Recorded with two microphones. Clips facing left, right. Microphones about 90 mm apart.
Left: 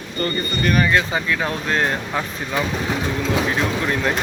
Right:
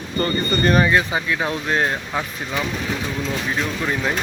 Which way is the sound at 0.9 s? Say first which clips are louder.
Even; 15° right (ahead or behind).